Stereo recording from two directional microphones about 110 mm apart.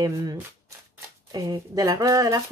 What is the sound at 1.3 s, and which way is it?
Speech, 35° right (ahead or behind).